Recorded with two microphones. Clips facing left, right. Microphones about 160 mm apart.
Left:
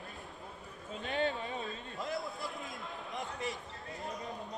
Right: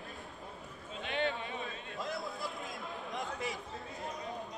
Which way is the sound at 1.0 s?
40° left (ahead or behind).